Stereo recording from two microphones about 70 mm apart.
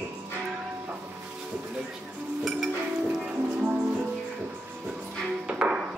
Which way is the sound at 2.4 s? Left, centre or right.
Centre.